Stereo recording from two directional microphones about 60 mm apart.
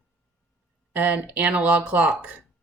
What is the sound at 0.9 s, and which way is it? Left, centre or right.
Speech, right.